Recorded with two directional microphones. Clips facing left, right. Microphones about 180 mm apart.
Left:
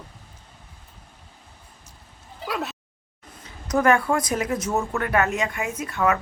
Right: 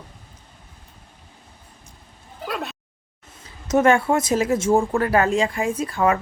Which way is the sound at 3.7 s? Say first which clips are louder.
Right 3 dB; 25° right (ahead or behind).